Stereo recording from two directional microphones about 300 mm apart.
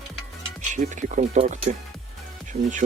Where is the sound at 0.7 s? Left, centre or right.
Right.